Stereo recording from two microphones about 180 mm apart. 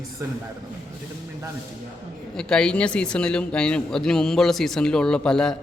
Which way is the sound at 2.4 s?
5° left (ahead or behind).